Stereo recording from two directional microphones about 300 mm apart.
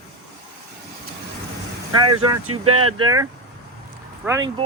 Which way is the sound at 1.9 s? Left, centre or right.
Right.